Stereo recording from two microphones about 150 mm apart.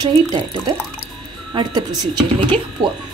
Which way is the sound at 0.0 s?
30° right (ahead or behind).